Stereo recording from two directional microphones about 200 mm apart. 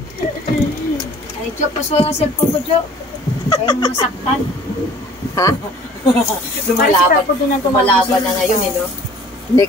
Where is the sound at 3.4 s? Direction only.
20° left (ahead or behind).